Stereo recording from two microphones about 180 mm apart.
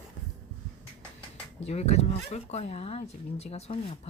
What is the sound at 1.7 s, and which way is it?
Speech, 35° left (ahead or behind).